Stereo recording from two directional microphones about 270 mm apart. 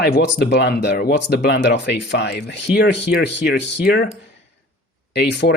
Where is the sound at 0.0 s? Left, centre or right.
Left.